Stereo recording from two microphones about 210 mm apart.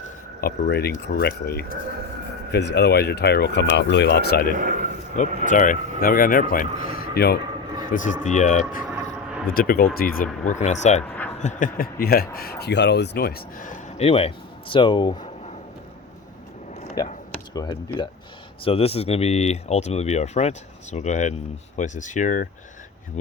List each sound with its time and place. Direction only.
0.4 s speech: 50° left (ahead or behind)
5.1 s speech: 35° left (ahead or behind)
7.9 s speech: 35° left (ahead or behind)
11.0 s a sound: 10° left (ahead or behind)
11.3 s speech: 35° left (ahead or behind)
14.1 s speech: 25° left (ahead or behind)
17.0 s speech: 20° left (ahead or behind); by 22.4 s 35° left (ahead or behind)